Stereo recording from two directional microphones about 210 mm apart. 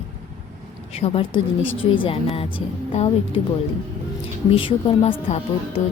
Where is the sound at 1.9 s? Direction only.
25° left (ahead or behind).